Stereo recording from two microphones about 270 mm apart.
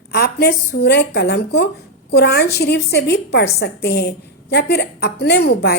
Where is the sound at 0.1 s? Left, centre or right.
Left.